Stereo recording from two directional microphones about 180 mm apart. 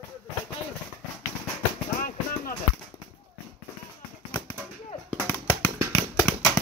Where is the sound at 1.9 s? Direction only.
50° left (ahead or behind).